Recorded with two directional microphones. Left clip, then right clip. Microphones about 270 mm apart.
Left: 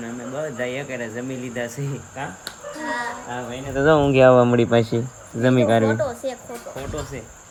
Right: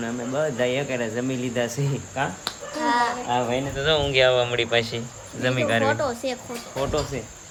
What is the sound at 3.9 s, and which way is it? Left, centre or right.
Speech, right.